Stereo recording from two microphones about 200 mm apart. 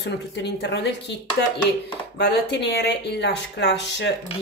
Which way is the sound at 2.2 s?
55° left (ahead or behind).